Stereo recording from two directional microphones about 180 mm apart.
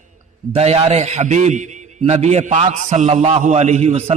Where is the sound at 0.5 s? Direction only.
35° right (ahead or behind).